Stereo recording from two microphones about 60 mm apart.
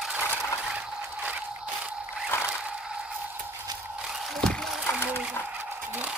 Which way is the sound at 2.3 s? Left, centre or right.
Left.